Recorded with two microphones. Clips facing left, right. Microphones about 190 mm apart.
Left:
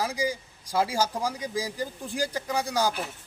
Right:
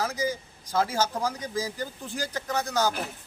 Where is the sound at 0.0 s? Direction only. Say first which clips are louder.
Even; 10° left (ahead or behind).